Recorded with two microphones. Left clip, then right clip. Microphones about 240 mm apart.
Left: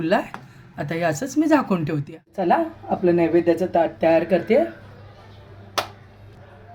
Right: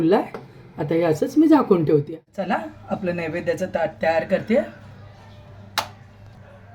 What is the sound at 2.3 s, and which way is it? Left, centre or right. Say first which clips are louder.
Speech: left 6 dB; centre.